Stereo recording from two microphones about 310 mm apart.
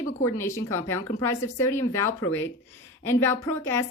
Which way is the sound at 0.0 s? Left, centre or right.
Centre.